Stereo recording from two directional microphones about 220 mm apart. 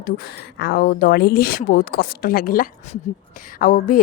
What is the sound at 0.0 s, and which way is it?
Speech, 45° left (ahead or behind).